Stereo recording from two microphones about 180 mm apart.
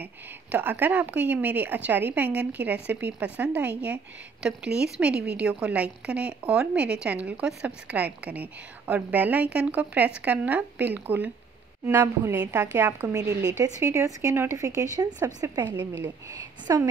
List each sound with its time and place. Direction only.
0.0 s speech: 10° right (ahead or behind)
13.2 s speech: 70° right (ahead or behind)
13.7 s speech: 20° right (ahead or behind)